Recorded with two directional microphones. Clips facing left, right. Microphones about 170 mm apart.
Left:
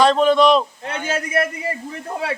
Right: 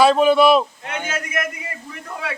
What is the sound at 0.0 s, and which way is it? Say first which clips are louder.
Speech: right 1 dB; 10° right (ahead or behind).